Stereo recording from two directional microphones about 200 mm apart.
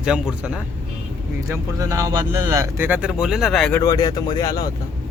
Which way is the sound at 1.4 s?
15° right (ahead or behind).